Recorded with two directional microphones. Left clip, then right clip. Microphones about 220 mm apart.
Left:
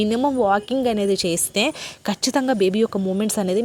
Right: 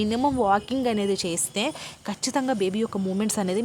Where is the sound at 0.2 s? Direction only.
10° left (ahead or behind).